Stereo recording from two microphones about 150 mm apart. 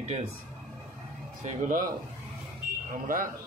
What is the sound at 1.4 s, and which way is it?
Speech, 65° right (ahead or behind).